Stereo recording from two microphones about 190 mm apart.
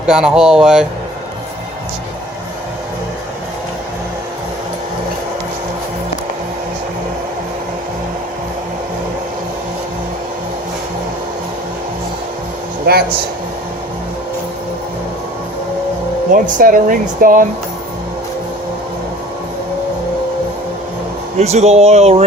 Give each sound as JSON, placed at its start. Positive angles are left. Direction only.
{"t": 0.0, "sound": "speech", "side_deg": -5}
{"t": 12.8, "sound": "speech", "side_deg": -55}
{"t": 16.3, "sound": "speech", "side_deg": -45}
{"t": 21.3, "sound": "speech", "side_deg": -35}